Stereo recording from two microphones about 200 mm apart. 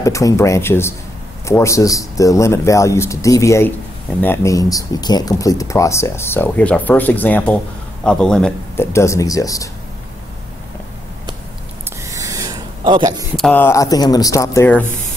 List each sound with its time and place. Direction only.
0.0 s speech: 15° left (ahead or behind)
12.1 s a sound: 15° right (ahead or behind)
13.4 s speech: 10° left (ahead or behind)